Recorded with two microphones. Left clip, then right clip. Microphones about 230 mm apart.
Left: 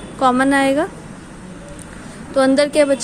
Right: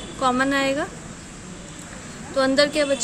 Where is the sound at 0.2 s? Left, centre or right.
Left.